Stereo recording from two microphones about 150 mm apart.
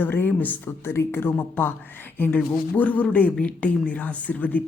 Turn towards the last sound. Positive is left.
turn(degrees=10)  # may be behind; listen again after turning